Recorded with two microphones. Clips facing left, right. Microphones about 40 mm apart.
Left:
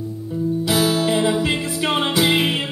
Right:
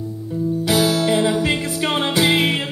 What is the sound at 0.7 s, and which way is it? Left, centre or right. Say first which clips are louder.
Music: right 2 dB; left.